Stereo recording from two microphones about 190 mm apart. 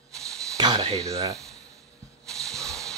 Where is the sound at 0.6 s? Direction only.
25° right (ahead or behind).